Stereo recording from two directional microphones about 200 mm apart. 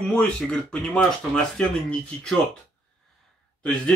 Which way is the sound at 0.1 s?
5° left (ahead or behind).